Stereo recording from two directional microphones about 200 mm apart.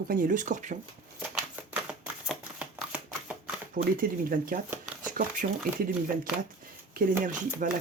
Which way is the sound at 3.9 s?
45° right (ahead or behind).